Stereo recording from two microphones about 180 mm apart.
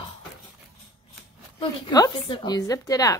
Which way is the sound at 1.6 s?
20° left (ahead or behind).